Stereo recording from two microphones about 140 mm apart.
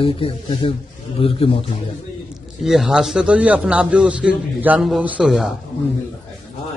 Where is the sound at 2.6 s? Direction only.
Centre (ahead or behind).